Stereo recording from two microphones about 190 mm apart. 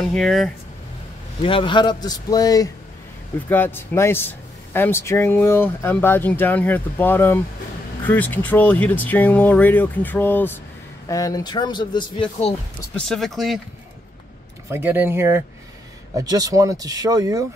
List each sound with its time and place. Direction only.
0.0 s speech: centre (ahead or behind)
1.4 s speech: 25° left (ahead or behind)
13.0 s speech: centre (ahead or behind)
14.7 s speech: 10° right (ahead or behind)